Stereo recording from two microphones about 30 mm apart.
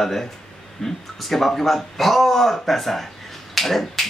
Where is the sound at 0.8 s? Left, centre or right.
Left.